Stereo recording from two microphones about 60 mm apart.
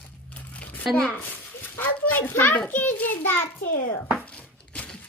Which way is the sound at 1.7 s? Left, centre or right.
Left.